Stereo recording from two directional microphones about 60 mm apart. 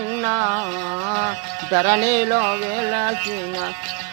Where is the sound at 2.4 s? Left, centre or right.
Centre.